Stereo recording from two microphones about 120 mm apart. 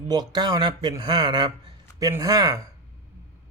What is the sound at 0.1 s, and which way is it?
Speech, 35° right (ahead or behind).